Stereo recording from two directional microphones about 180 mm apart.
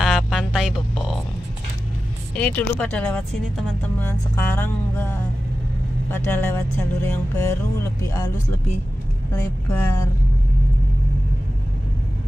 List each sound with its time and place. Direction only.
0.0 s music: centre (ahead or behind)
2.3 s a woman's voice: 5° left (ahead or behind)
9.3 s a woman's voice: 15° left (ahead or behind)